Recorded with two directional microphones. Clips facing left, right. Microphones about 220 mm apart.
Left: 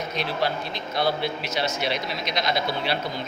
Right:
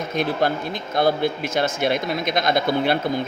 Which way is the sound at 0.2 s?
50° right (ahead or behind).